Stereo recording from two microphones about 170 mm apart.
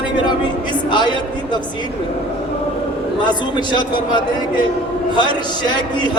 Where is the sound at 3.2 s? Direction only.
25° left (ahead or behind).